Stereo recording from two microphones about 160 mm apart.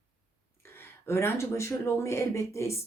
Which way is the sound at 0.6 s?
15° left (ahead or behind).